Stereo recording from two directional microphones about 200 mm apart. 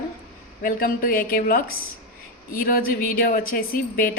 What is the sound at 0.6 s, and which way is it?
Speech, 45° left (ahead or behind).